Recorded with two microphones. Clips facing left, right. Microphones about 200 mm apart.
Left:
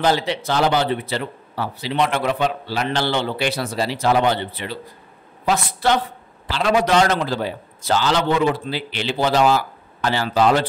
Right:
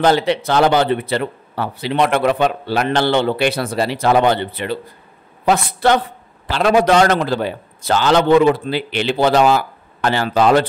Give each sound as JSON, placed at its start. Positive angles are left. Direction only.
{"t": 0.0, "sound": "speech", "side_deg": -60}